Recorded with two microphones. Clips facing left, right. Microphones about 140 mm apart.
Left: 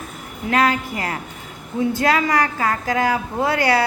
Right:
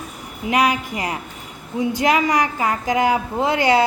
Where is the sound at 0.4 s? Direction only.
15° right (ahead or behind).